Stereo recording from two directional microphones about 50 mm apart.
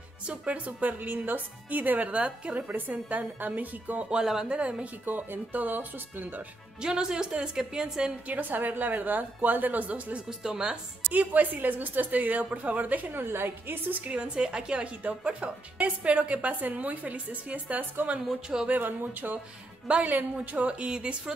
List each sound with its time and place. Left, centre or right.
0.3 s a woman's voice: right
4.1 s a woman's voice: centre
4.5 s speech: right
5.0 s a woman's voice: right
6.8 s a woman's voice: centre
8.3 s a woman's voice: right
10.4 s a woman's voice: centre
11.1 s a woman's voice: right
13.2 s a woman's voice: right
13.9 s a woman's voice: right
19.9 s speech: right